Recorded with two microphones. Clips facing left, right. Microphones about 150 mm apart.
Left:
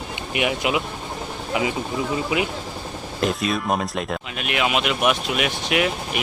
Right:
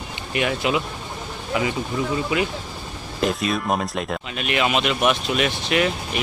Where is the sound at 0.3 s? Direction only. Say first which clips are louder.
Even; 15° left (ahead or behind).